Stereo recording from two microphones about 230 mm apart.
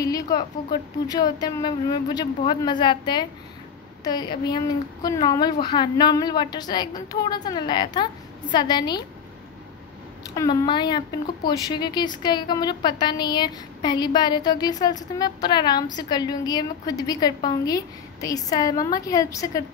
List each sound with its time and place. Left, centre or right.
0.0 s a woman's voice: centre
10.3 s a woman's voice: centre